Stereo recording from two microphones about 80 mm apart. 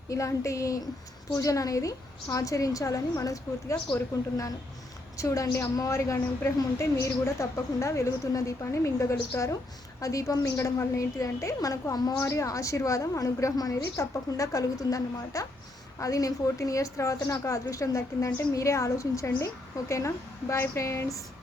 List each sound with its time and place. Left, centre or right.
0.1 s a woman's voice: left
5.1 s a woman's voice: left
12.1 s a woman's voice: left